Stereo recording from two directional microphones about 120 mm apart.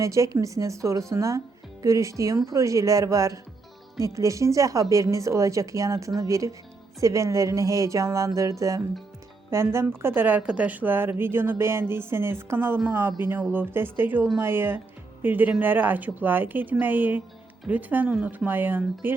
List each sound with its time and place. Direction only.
0.0 s a woman's voice: 25° right (ahead or behind)